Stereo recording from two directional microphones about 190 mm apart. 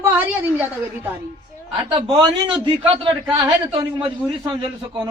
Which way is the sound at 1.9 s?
20° right (ahead or behind).